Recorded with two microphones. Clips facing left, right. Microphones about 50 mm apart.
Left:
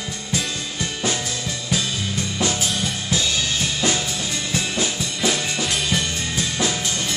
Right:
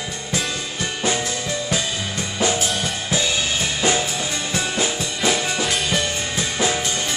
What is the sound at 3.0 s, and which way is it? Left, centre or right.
Drum kit, centre.